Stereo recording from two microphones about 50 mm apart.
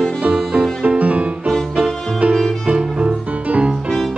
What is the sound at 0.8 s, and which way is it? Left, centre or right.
Music, right.